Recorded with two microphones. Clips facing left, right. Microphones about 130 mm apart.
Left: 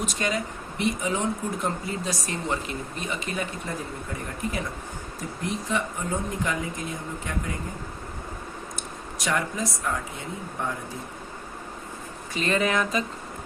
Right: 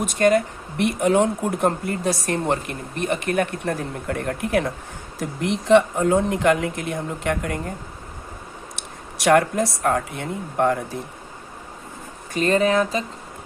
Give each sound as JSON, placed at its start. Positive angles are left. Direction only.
{"t": 0.0, "sound": "speech", "side_deg": -55}
{"t": 8.7, "sound": "speech", "side_deg": -70}
{"t": 12.3, "sound": "speech", "side_deg": -40}